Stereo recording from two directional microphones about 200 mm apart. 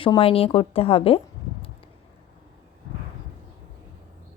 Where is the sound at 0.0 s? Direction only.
25° left (ahead or behind).